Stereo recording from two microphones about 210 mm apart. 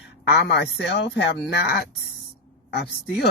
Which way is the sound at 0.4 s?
55° left (ahead or behind).